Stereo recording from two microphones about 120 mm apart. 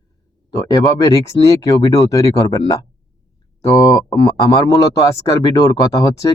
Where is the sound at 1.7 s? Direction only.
25° left (ahead or behind).